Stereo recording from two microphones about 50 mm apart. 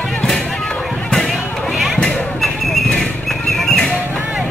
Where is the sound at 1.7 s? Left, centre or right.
Centre.